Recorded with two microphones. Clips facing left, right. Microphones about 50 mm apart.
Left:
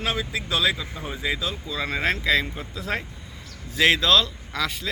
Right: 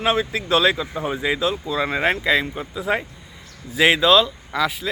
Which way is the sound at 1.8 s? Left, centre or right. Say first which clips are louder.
Right 3 dB; right.